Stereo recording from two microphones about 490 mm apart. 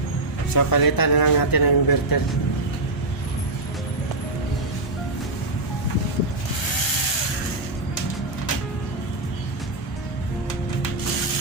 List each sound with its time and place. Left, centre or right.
0.5 s speech: left